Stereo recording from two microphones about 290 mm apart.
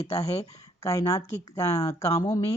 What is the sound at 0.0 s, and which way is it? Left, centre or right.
Speech, left.